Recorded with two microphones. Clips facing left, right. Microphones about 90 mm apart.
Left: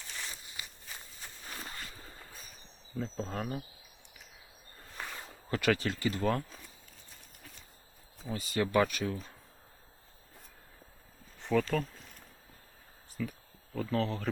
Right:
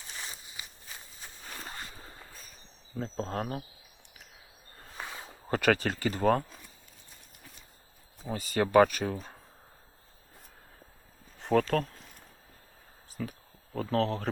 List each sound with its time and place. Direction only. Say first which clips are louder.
0.1 s walk: right 1 dB; 20° right (ahead or behind)
1.6 s zipper: right 2 dB; 25° right (ahead or behind)
3.0 s speech: right 3 dB; 45° right (ahead or behind)
4.9 s a sound: right 1 dB; 15° right (ahead or behind)
5.5 s speech: right 3 dB; 45° right (ahead or behind)
8.3 s speech: right 5 dB; 40° right (ahead or behind)
11.5 s speech: right 4 dB; 55° right (ahead or behind)
13.2 s speech: even; 45° right (ahead or behind)
13.9 s speech: right 4 dB; 75° right (ahead or behind)